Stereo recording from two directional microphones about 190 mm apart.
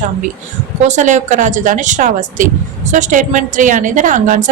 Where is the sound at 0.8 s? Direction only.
40° right (ahead or behind).